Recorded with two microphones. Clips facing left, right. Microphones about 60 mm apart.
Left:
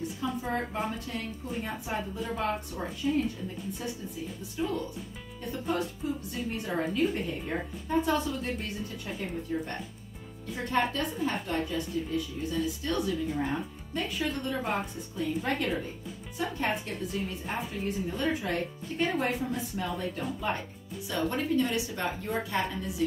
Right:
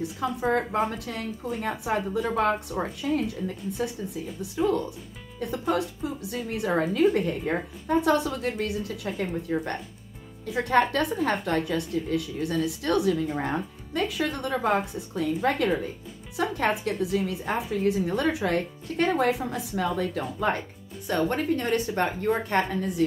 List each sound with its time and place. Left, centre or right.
0.2 s a woman's voice: right
5.5 s a woman's voice: right
6.5 s a woman's voice: right
21.1 s a woman's voice: right